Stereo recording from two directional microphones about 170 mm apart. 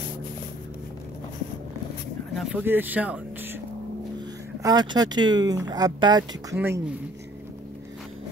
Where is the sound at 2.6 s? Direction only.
10° right (ahead or behind).